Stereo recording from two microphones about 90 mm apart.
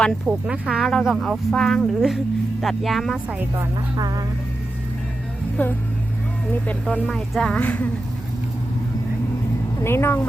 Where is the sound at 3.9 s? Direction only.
50° right (ahead or behind).